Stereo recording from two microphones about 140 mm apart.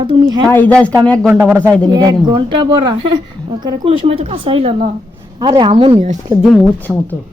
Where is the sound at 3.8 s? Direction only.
40° right (ahead or behind).